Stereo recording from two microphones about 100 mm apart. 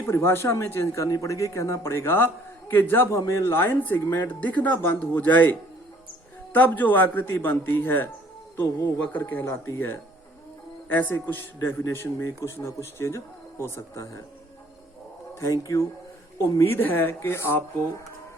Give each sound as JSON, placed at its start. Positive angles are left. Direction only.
{"t": 0.0, "sound": "speech", "side_deg": 30}
{"t": 9.1, "sound": "speech", "side_deg": 25}
{"t": 15.6, "sound": "speech", "side_deg": 35}